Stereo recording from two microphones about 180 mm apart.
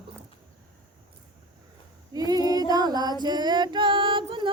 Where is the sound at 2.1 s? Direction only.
20° right (ahead or behind).